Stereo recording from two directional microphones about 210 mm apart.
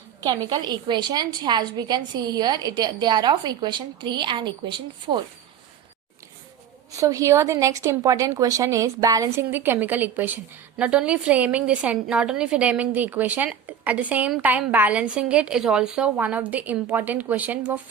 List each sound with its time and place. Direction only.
0.2 s a woman's voice: 20° right (ahead or behind)
6.9 s a woman's voice: 15° right (ahead or behind)